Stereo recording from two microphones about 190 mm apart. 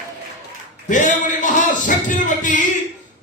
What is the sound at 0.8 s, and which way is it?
Music, 40° left (ahead or behind).